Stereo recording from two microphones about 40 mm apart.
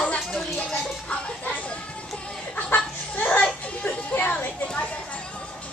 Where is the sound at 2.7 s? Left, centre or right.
Left.